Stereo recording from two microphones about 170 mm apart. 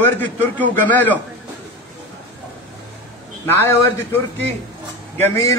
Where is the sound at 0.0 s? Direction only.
10° left (ahead or behind).